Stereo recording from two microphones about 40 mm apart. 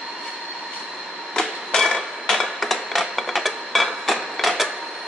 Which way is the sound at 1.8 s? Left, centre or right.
Centre.